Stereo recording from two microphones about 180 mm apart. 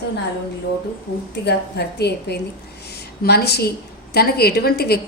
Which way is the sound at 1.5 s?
65° left (ahead or behind).